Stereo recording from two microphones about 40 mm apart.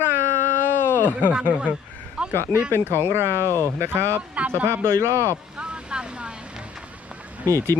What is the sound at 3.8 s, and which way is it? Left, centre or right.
Speech, right.